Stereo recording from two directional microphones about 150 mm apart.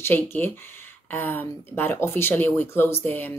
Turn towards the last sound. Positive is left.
turn(degrees=15)  # may be behind; listen again after turning